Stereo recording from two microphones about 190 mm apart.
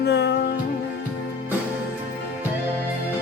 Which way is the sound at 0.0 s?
60° left (ahead or behind).